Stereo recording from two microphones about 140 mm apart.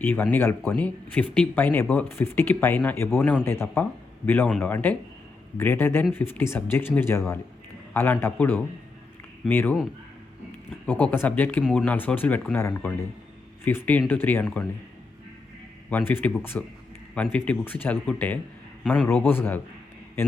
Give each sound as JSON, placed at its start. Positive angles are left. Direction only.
{"t": 0.0, "sound": "speech", "side_deg": 15}
{"t": 10.8, "sound": "speech", "side_deg": 10}
{"t": 15.9, "sound": "a man's voice", "side_deg": 15}